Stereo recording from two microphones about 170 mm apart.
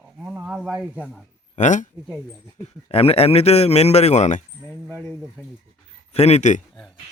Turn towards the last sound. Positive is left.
turn(degrees=45)  # may be behind; listen again after turning